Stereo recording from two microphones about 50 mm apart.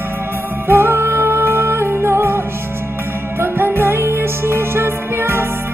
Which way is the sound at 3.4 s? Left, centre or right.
Right.